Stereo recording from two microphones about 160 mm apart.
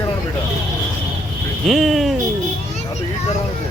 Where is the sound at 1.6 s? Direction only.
Centre (ahead or behind).